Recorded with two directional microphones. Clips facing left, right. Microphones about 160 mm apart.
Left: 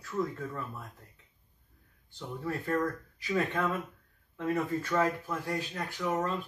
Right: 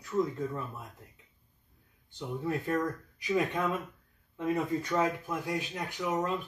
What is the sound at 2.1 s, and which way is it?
Speech, 15° right (ahead or behind).